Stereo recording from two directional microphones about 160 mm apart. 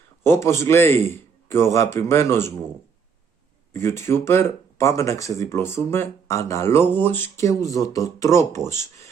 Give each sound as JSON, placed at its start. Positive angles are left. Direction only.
{"t": 0.2, "sound": "speech", "side_deg": 15}
{"t": 3.7, "sound": "speech", "side_deg": 15}